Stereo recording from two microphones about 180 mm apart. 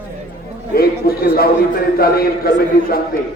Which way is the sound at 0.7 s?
55° left (ahead or behind).